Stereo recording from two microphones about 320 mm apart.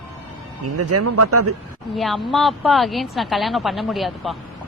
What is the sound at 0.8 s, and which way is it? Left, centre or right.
Speech, right.